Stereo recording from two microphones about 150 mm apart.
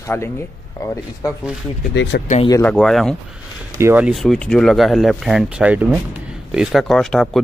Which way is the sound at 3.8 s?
15° right (ahead or behind).